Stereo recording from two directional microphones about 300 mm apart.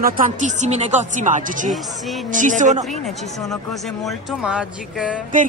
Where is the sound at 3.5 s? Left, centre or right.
Centre.